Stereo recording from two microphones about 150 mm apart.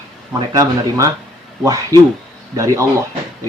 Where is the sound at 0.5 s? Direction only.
20° right (ahead or behind).